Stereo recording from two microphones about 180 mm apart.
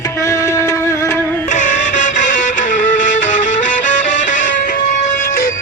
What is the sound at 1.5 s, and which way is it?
Music, 45° left (ahead or behind).